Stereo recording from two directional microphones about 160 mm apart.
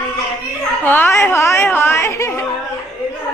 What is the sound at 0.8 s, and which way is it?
Speech, 10° left (ahead or behind).